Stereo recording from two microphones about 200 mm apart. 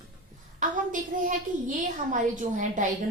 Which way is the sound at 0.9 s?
40° right (ahead or behind).